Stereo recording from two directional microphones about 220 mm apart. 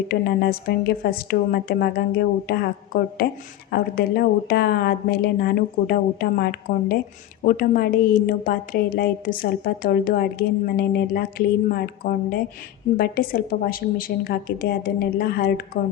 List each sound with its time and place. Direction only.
0.1 s a woman's voice: 45° left (ahead or behind)